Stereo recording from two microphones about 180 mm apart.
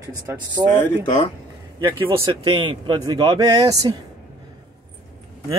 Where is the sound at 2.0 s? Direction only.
30° right (ahead or behind).